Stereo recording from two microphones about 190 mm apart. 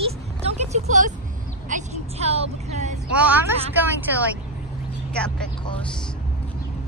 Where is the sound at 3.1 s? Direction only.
10° right (ahead or behind).